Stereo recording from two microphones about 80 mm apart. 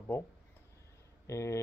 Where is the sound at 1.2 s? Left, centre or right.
Left.